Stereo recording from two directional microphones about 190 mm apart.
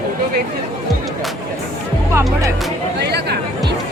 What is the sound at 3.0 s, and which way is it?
Chatter, 60° right (ahead or behind).